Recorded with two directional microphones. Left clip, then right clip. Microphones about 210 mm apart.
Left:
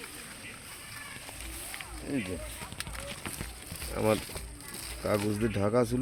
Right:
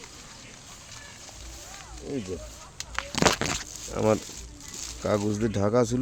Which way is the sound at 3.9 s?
45° right (ahead or behind).